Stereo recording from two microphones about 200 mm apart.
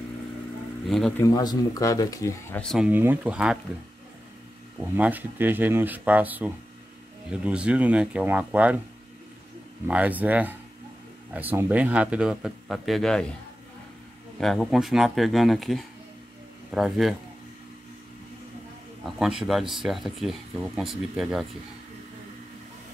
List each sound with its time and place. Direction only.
0.8 s speech: centre (ahead or behind)
1.2 s speech: 20° left (ahead or behind)
2.6 s speech: centre (ahead or behind)
2.9 s speech: 10° right (ahead or behind)
4.9 s speech: 10° right (ahead or behind)
9.8 s speech: 5° right (ahead or behind)
14.4 s speech: centre (ahead or behind)
19.1 s speech: centre (ahead or behind)